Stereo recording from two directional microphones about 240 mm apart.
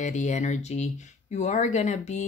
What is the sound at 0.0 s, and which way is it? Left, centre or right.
Speech, left.